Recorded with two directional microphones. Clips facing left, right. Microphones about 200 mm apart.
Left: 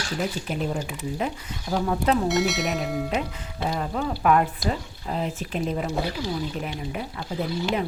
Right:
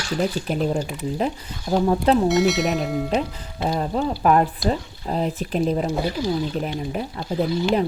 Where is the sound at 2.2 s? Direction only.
Centre (ahead or behind).